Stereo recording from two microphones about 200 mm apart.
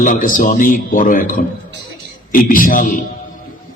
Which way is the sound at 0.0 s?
40° left (ahead or behind).